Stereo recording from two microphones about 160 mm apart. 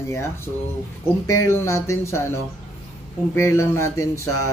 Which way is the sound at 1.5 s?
15° left (ahead or behind).